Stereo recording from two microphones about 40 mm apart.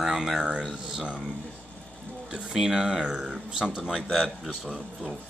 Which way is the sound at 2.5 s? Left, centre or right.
Centre.